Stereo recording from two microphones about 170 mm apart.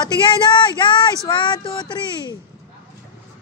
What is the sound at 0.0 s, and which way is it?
Speech, 25° left (ahead or behind).